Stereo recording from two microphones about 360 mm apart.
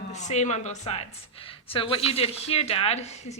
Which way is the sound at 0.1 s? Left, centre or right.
Centre.